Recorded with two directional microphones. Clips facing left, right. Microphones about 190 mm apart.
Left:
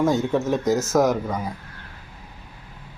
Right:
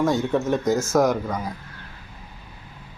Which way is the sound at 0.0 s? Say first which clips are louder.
Left 1 dB; 5° left (ahead or behind).